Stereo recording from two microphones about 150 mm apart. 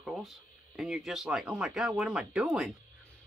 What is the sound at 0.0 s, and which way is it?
Speech, centre (ahead or behind).